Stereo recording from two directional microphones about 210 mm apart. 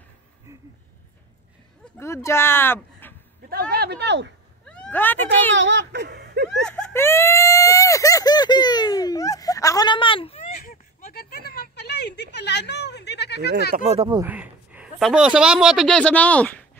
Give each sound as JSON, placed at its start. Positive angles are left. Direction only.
{"t": 2.0, "sound": "speech", "side_deg": 10}
{"t": 3.7, "sound": "speech", "side_deg": -50}
{"t": 4.6, "sound": "speech", "side_deg": 5}
{"t": 5.6, "sound": "speech", "side_deg": -60}
{"t": 6.6, "sound": "speech", "side_deg": 5}
{"t": 10.6, "sound": "a sound", "side_deg": 45}
{"t": 13.7, "sound": "speech", "side_deg": -30}
{"t": 14.2, "sound": "a man's voice", "side_deg": -5}